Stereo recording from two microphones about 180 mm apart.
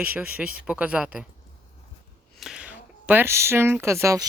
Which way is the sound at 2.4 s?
5° right (ahead or behind).